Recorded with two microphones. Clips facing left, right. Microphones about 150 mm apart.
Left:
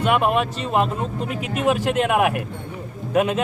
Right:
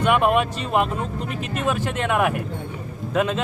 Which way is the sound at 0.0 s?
Centre (ahead or behind).